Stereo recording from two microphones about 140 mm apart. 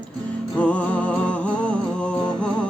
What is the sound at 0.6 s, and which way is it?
Music, 10° left (ahead or behind).